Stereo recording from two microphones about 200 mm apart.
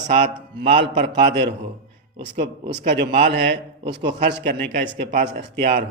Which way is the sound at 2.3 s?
55° right (ahead or behind).